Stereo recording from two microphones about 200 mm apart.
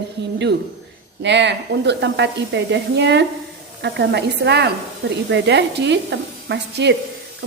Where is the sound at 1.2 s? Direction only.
60° right (ahead or behind).